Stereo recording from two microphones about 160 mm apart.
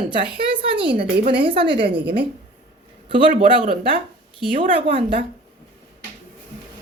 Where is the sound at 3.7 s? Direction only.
35° right (ahead or behind).